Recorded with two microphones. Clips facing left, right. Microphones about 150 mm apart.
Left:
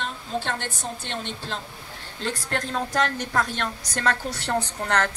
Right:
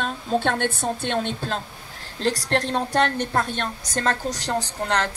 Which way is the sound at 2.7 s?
30° right (ahead or behind).